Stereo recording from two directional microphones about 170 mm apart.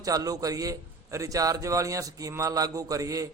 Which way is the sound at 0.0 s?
20° right (ahead or behind).